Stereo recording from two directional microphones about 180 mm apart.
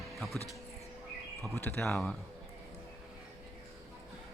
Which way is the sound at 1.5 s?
10° left (ahead or behind).